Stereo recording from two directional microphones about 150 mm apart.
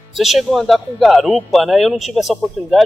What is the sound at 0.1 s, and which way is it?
Speech, centre (ahead or behind).